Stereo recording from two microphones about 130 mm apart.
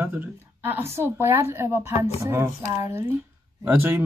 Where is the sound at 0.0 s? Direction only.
15° right (ahead or behind).